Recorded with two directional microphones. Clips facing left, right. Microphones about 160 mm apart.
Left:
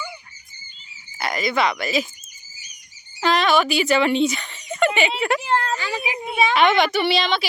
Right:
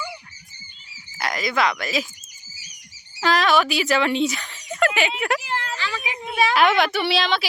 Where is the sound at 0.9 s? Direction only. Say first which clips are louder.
Right 3 dB; 90° right.